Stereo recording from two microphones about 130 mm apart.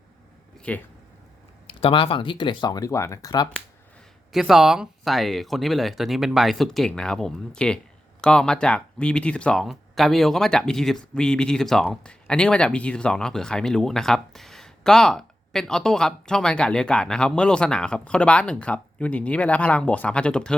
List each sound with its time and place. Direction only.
0.7 s speech: 10° left (ahead or behind)
1.6 s speech: 40° left (ahead or behind)
4.3 s speech: centre (ahead or behind)